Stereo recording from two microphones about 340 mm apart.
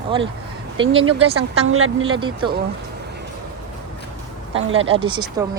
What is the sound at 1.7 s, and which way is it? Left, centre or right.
Speech, right.